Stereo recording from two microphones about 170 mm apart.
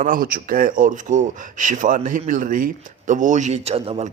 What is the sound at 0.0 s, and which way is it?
Speech, 55° right (ahead or behind).